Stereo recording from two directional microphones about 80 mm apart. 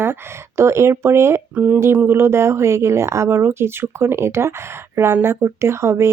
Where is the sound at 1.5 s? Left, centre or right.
Right.